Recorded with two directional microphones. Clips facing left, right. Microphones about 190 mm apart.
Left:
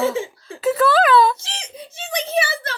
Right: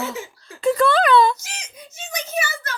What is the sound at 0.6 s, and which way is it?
Speech, 5° left (ahead or behind).